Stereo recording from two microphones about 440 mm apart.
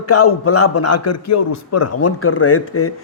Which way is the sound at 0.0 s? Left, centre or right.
Left.